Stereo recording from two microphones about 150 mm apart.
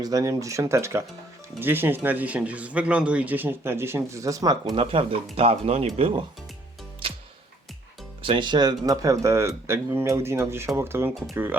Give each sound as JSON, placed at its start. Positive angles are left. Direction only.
{"t": 0.0, "sound": "speech", "side_deg": -25}
{"t": 4.7, "sound": "speech", "side_deg": -35}
{"t": 8.2, "sound": "speech", "side_deg": -35}